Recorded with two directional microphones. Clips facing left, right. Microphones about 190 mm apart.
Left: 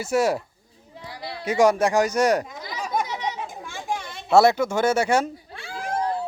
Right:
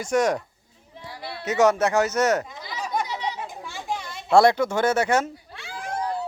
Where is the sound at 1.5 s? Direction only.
10° left (ahead or behind).